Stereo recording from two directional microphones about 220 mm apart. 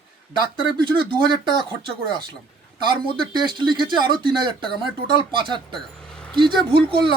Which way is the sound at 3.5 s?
20° right (ahead or behind).